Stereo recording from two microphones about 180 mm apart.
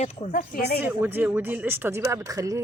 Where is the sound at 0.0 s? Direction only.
50° left (ahead or behind).